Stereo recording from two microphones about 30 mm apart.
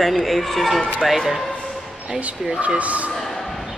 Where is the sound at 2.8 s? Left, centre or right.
Right.